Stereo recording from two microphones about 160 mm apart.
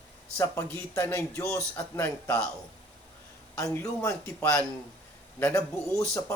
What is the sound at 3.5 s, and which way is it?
A man's voice, 15° left (ahead or behind).